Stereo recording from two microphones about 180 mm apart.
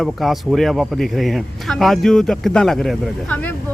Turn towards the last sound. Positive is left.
turn(degrees=5)  # may be behind; listen again after turning